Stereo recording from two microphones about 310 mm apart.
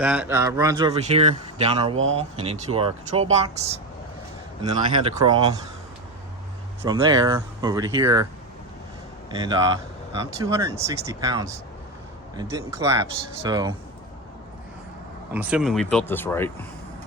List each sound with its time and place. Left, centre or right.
0.0 s speech: centre
4.6 s speech: centre
6.8 s speech: centre
9.3 s speech: centre
15.3 s speech: centre